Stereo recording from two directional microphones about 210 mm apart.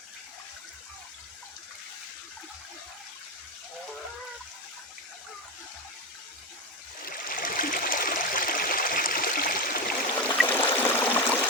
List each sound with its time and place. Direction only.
7.0 s stream: 40° left (ahead or behind)
10.2 s stream: 10° left (ahead or behind)